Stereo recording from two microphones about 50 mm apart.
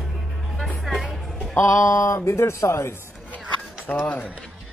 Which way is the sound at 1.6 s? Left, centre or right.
Left.